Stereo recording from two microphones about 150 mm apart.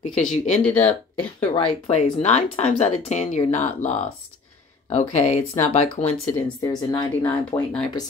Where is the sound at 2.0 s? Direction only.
45° left (ahead or behind).